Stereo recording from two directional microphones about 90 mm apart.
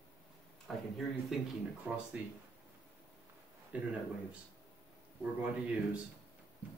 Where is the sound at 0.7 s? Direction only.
5° left (ahead or behind).